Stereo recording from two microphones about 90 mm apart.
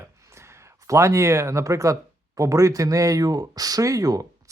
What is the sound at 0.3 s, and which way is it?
Speech, 30° right (ahead or behind).